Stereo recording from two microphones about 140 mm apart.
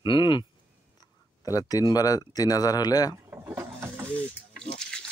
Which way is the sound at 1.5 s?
25° left (ahead or behind).